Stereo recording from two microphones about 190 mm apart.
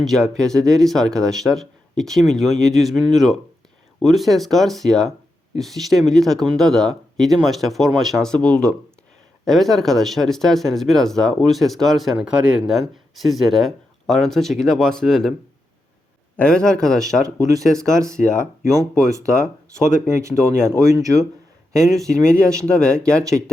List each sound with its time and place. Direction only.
0.0 s speech: centre (ahead or behind)
16.4 s speech: 5° left (ahead or behind)
20.2 s speech: 15° right (ahead or behind)
21.8 s speech: centre (ahead or behind)